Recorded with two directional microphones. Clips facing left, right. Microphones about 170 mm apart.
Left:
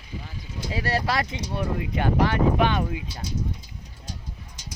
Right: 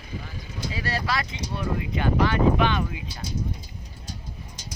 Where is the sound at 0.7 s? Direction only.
50° left (ahead or behind).